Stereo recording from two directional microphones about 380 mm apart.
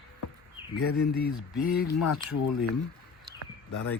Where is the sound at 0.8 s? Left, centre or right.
Left.